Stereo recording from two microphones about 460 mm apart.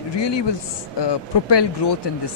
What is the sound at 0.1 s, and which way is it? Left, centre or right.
Speech, left.